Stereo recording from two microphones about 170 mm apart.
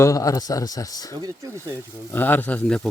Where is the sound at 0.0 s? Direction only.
20° left (ahead or behind).